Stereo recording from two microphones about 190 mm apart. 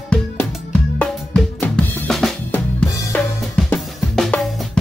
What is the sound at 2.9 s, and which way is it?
Drum kit, 15° left (ahead or behind).